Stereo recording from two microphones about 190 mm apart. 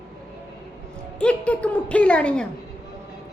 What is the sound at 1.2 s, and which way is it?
A woman's voice, 5° left (ahead or behind).